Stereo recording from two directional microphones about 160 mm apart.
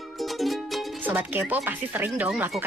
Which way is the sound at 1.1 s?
10° right (ahead or behind).